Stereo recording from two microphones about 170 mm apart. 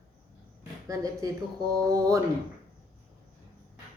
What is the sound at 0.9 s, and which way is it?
Speech, 20° right (ahead or behind).